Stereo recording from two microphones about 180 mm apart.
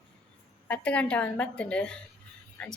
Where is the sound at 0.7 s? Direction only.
5° left (ahead or behind).